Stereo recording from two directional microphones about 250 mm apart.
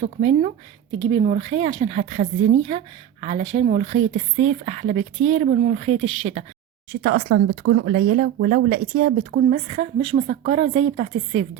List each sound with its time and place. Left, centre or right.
0.0 s a woman's voice: right
7.0 s a woman's voice: right